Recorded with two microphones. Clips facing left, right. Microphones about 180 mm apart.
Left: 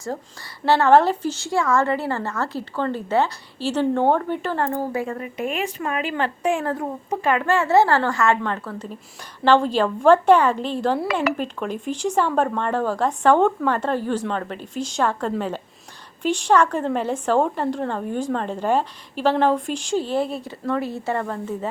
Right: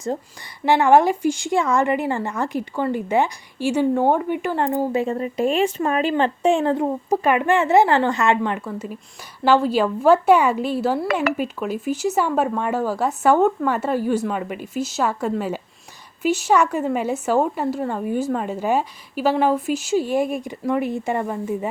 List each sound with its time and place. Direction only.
0.6 s a woman's voice: 15° right (ahead or behind)
11.1 s speech: 50° right (ahead or behind)
11.3 s a woman's voice: 5° right (ahead or behind)